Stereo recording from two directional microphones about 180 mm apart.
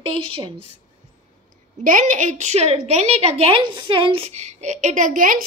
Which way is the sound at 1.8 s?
45° right (ahead or behind).